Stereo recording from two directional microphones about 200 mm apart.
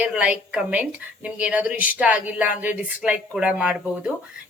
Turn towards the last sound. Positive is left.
turn(degrees=-5)  # may be behind; listen again after turning